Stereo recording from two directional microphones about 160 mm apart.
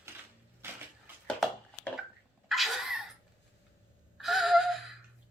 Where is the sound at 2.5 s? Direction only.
Centre (ahead or behind).